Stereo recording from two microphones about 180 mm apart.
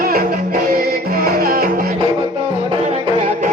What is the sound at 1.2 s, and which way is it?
Music, 55° right (ahead or behind).